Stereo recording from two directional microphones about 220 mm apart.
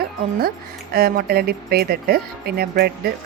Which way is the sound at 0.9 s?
45° right (ahead or behind).